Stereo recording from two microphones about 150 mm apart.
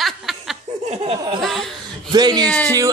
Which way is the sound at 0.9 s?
40° right (ahead or behind).